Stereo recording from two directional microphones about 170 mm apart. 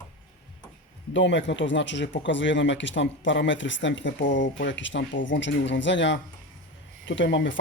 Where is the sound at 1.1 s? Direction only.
90° left.